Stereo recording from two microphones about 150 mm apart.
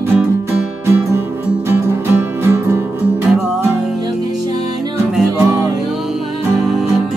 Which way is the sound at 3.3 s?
5° right (ahead or behind).